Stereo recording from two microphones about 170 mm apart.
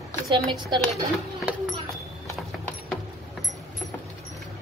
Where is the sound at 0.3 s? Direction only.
25° right (ahead or behind).